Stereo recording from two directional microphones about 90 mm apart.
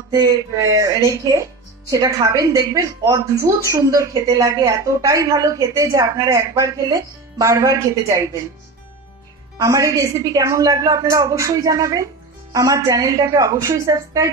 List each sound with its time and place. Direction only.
0.1 s speech: 40° right (ahead or behind)
9.6 s speech: 40° right (ahead or behind)